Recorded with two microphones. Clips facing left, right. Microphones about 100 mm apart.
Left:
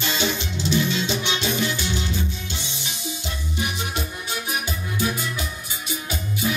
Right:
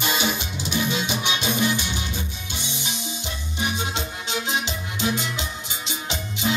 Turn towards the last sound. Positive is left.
turn(degrees=-25)  # may be behind; listen again after turning